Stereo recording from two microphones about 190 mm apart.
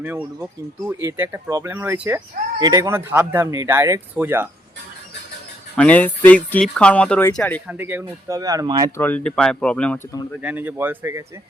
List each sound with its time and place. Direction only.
0.0 s speech: 10° right (ahead or behind)
5.7 s speech: 5° left (ahead or behind)
7.7 s speech: 10° right (ahead or behind)
9.0 s speech: 10° left (ahead or behind)
10.4 s speech: 10° right (ahead or behind)